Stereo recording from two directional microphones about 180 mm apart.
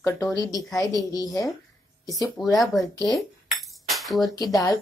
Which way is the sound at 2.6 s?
Centre (ahead or behind).